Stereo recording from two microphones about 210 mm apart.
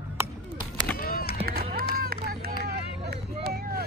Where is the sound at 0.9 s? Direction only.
45° left (ahead or behind).